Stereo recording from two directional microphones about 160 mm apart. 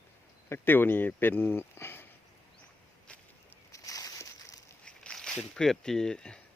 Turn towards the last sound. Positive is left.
turn(degrees=5)  # may be behind; listen again after turning